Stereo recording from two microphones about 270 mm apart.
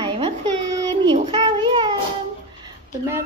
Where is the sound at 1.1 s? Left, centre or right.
Centre.